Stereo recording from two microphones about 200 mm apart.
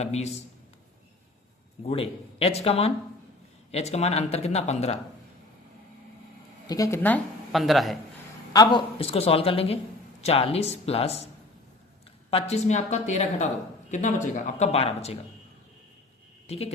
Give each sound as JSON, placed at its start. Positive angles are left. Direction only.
{"t": 0.0, "sound": "speech", "side_deg": 35}
{"t": 1.8, "sound": "speech", "side_deg": 30}
{"t": 6.7, "sound": "speech", "side_deg": 15}
{"t": 8.5, "sound": "a man's voice", "side_deg": 25}
{"t": 12.3, "sound": "speech", "side_deg": 35}